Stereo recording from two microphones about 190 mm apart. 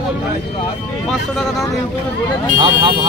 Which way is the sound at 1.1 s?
Centre (ahead or behind).